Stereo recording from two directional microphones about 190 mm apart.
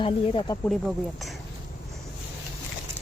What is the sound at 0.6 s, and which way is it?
Speech, centre (ahead or behind).